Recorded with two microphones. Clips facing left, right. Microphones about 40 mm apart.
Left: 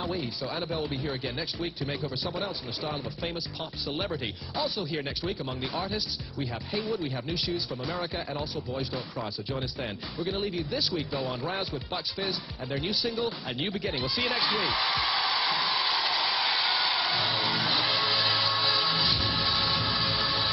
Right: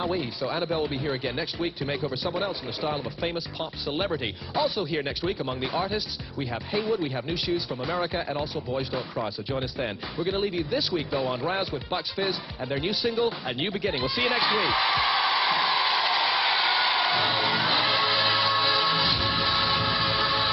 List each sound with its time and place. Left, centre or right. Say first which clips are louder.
0.1 s speech: right 4 dB; centre
13.9 s a sound: right 4 dB; centre
16.3 s music: right 4 dB; centre
19.1 s train: right 3 dB; centre